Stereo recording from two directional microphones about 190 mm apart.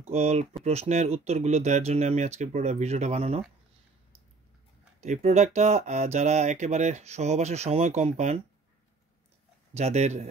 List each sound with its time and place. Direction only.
0.1 s speech: 35° right (ahead or behind)
5.0 s speech: 35° right (ahead or behind)
9.8 s speech: 35° right (ahead or behind)